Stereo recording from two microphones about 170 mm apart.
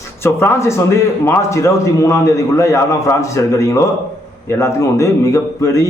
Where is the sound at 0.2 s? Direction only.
15° left (ahead or behind).